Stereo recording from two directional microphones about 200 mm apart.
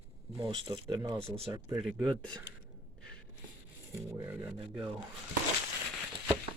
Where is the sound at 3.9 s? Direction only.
15° right (ahead or behind).